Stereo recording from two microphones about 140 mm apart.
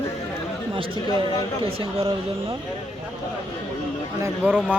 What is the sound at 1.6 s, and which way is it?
Speech, 40° right (ahead or behind).